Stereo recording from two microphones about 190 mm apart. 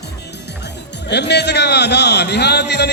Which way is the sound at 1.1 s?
60° left (ahead or behind).